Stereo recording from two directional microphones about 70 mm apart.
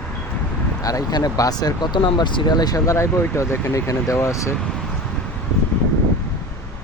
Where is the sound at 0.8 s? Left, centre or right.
Left.